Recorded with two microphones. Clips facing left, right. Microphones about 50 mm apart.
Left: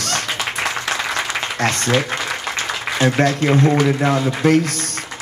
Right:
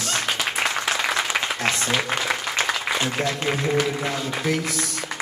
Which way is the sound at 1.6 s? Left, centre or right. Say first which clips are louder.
Left 8 dB; left.